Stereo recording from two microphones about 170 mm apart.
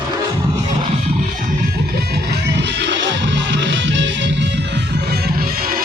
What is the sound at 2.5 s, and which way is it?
Music, 90° right.